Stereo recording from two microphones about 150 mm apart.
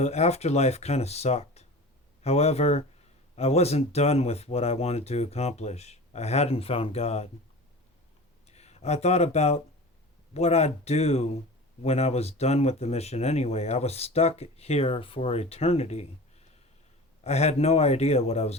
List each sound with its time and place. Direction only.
0.0 s speech: 45° left (ahead or behind)
8.4 s speech: 45° left (ahead or behind)